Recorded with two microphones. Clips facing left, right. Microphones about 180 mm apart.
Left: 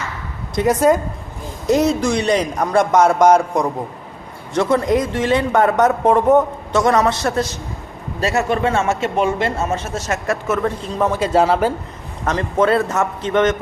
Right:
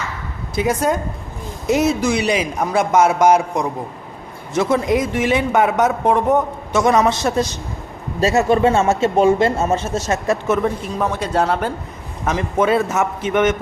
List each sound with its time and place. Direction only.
0.5 s a man's voice: centre (ahead or behind)
6.7 s speech: 10° right (ahead or behind)
8.2 s speech: 25° right (ahead or behind)
10.9 s a man's voice: 5° left (ahead or behind)
12.2 s speech: 10° right (ahead or behind)